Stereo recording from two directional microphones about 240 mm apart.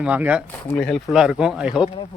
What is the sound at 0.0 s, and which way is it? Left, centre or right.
Speech, centre.